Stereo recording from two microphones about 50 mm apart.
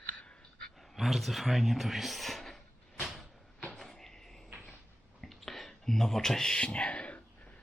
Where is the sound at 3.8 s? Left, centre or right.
Centre.